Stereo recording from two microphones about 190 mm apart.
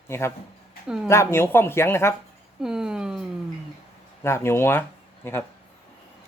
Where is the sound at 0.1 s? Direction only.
15° left (ahead or behind).